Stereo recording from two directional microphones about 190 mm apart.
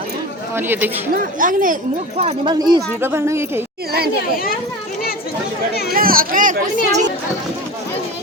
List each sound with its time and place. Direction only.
0.5 s speech: 10° right (ahead or behind)
1.1 s speech: 45° right (ahead or behind); by 3.6 s 15° right (ahead or behind)
5.9 s speech: 50° right (ahead or behind)